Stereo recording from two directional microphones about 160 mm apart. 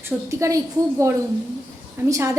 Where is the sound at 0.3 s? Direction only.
20° right (ahead or behind).